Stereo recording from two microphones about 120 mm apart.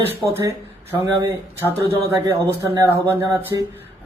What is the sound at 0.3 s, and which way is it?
Speech, 20° right (ahead or behind).